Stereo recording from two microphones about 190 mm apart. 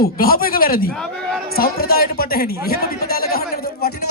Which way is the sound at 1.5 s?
55° left (ahead or behind).